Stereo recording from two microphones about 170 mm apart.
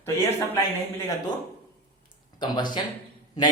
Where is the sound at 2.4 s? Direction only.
25° left (ahead or behind).